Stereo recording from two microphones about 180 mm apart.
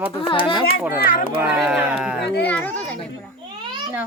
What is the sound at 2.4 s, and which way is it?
Speech, 10° left (ahead or behind).